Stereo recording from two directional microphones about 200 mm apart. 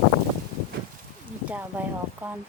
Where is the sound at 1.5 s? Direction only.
10° right (ahead or behind).